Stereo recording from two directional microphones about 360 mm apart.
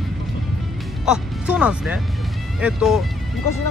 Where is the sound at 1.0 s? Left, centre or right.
Centre.